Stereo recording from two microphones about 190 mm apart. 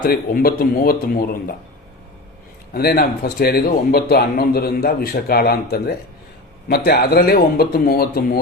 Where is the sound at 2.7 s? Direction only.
55° left (ahead or behind).